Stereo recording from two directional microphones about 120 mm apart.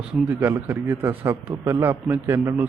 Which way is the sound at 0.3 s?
15° right (ahead or behind).